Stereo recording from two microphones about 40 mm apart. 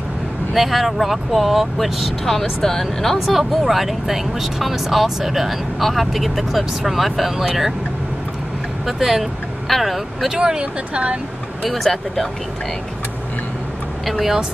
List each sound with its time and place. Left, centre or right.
0.6 s speech: centre
2.2 s speech: centre
3.3 s speech: centre
8.8 s speech: centre
10.3 s speech: right
10.6 s speech: right
11.6 s speech: centre